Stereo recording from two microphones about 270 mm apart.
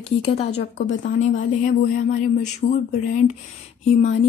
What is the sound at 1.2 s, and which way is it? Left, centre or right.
Speech, left.